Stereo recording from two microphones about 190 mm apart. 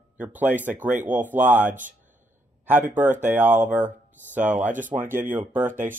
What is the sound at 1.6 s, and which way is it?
Speech, 45° right (ahead or behind).